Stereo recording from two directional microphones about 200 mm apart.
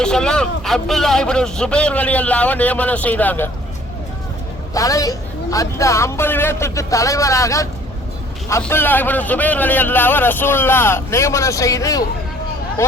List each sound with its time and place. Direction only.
0.0 s a man's voice: 5° left (ahead or behind)
4.7 s a man's voice: 15° left (ahead or behind)